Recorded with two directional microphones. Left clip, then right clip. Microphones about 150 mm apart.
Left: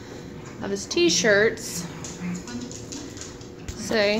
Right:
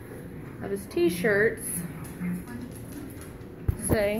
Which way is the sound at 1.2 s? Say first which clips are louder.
Left 5 dB; 5° left (ahead or behind).